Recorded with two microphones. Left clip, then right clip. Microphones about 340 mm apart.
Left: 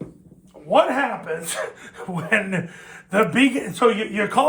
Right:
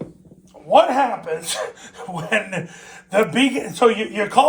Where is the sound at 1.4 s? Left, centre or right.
Centre.